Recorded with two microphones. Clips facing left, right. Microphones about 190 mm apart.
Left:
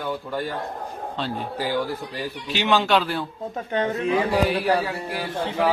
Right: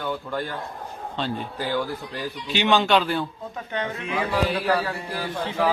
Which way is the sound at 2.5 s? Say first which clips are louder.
Right 1 dB; 5° left (ahead or behind).